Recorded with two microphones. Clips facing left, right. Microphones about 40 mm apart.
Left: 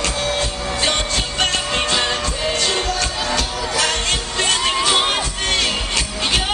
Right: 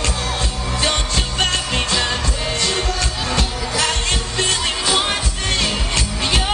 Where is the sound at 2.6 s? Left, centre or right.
Left.